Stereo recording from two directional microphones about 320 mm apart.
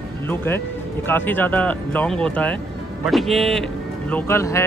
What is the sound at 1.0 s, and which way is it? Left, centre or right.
Speech, centre.